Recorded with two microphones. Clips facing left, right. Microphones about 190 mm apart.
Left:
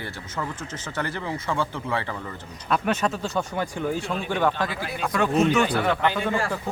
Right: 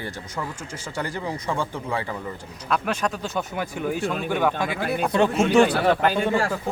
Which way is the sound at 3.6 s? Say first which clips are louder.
Right 1 dB; 10° right (ahead or behind).